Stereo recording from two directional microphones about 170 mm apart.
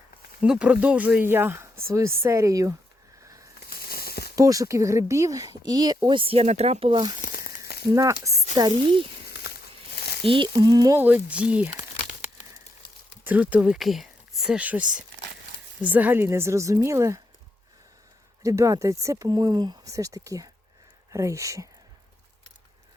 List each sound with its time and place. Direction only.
0.4 s a woman's voice: 5° right (ahead or behind)
3.7 s a sound: 60° left (ahead or behind)
4.4 s speech: 20° right (ahead or behind)
7.2 s crumpling: 55° left (ahead or behind)
7.9 s speech: 20° right (ahead or behind)
9.5 s a sound: 65° left (ahead or behind)
10.2 s speech: 30° right (ahead or behind)
11.0 s a woman's voice: 10° right (ahead or behind)
13.2 s a woman's voice: 10° right (ahead or behind)
18.4 s a woman's voice: 20° right (ahead or behind)